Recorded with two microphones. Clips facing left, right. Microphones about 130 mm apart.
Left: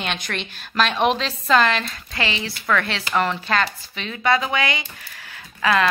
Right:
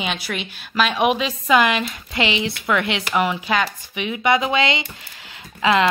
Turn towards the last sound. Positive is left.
turn(degrees=-20)  # may be behind; listen again after turning